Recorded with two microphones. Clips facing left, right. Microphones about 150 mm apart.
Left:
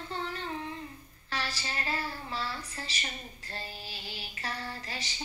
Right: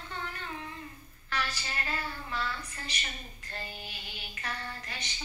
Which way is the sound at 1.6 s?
35° left (ahead or behind).